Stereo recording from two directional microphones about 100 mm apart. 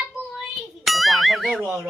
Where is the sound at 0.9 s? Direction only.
Centre (ahead or behind).